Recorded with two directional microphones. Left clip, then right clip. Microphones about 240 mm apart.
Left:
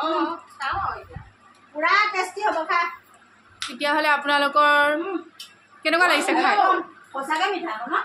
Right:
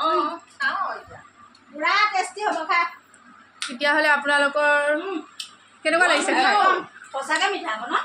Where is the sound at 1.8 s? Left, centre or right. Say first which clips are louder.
Even; centre.